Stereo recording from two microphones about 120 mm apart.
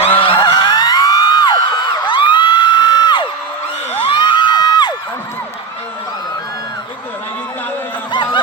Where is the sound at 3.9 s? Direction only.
45° left (ahead or behind).